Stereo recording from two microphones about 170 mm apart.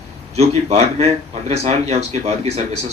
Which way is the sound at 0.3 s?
35° right (ahead or behind).